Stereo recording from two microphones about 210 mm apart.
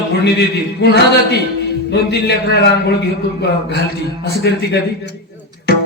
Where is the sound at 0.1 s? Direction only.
50° left (ahead or behind).